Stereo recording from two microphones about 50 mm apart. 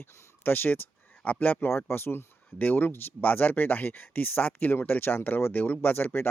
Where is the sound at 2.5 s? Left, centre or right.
Left.